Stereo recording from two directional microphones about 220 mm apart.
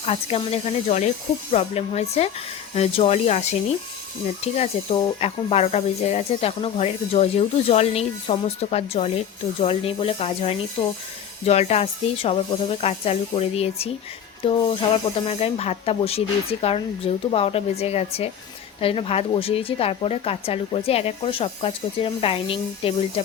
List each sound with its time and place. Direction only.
0.0 s speech: 30° left (ahead or behind)